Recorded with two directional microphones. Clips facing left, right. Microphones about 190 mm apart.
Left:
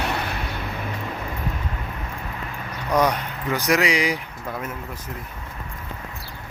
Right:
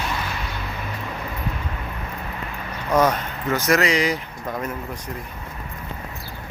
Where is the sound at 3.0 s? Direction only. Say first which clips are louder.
Right 2 dB; 15° left (ahead or behind).